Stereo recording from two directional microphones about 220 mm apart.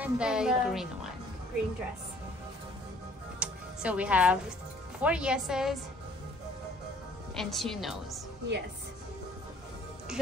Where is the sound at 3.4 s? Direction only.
5° right (ahead or behind).